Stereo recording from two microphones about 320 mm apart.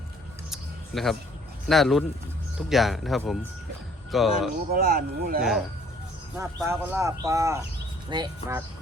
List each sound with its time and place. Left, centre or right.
0.5 s a sound: centre
1.6 s speech: centre
4.7 s speech: right
5.4 s speech: centre